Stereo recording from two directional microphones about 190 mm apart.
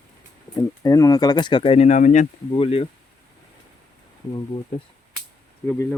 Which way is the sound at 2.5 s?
30° left (ahead or behind).